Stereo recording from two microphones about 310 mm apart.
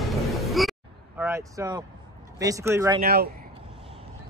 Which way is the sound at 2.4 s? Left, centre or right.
Centre.